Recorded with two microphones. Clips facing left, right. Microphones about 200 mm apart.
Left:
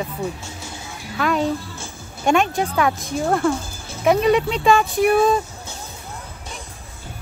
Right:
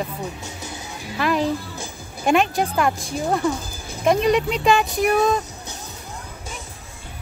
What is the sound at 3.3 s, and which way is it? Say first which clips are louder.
Speech: left 2 dB; 15° right (ahead or behind).